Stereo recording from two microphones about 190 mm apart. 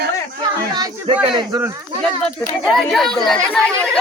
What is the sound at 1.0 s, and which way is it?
Speech, 25° right (ahead or behind).